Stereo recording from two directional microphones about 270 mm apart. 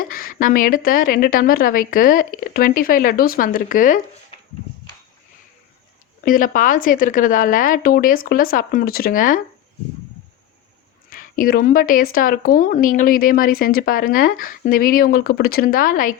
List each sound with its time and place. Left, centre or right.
0.0 s speech: left
6.2 s speech: left
11.1 s speech: left